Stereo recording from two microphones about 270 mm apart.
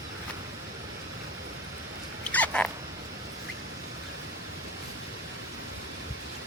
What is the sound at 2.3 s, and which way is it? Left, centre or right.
Cat, centre.